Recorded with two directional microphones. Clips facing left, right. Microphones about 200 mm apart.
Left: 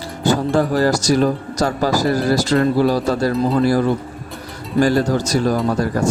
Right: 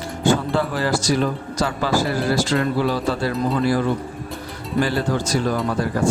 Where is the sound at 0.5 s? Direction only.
40° left (ahead or behind).